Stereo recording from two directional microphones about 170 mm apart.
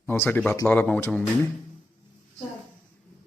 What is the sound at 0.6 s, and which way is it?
Speech, 10° left (ahead or behind).